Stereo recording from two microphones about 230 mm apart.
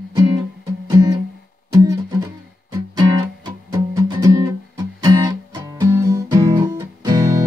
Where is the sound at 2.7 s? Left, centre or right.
Centre.